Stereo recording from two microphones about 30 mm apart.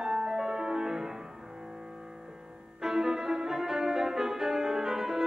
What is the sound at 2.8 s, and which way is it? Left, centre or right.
Music, centre.